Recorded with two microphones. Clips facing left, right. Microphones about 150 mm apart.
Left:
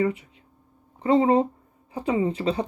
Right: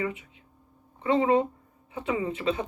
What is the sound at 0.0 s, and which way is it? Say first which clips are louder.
Speech: left 7 dB; 35° left (ahead or behind).